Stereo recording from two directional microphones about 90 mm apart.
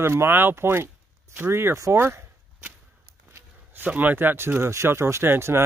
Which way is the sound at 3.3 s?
20° right (ahead or behind).